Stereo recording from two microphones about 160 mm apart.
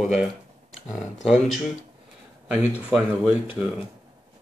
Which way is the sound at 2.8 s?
5° right (ahead or behind).